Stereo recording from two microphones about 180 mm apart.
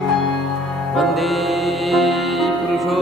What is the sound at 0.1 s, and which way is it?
Music, centre (ahead or behind).